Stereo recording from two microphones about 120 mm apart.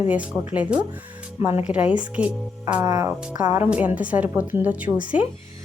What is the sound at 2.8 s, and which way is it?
Speech, 30° right (ahead or behind).